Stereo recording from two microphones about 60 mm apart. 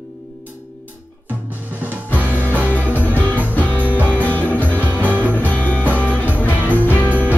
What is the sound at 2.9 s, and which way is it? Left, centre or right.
Music, left.